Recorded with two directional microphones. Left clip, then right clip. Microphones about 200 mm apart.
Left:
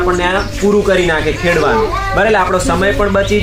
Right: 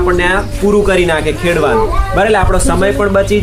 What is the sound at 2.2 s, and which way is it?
Speech, 50° right (ahead or behind).